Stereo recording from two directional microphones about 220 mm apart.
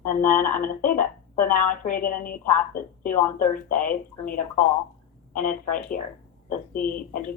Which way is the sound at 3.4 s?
35° left (ahead or behind).